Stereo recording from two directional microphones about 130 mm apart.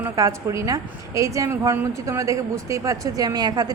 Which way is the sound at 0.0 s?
25° right (ahead or behind).